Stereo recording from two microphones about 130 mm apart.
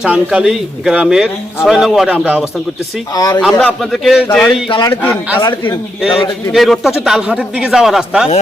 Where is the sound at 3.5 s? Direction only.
5° left (ahead or behind).